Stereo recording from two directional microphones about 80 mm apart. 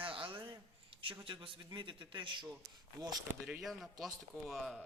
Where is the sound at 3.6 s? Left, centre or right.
Centre.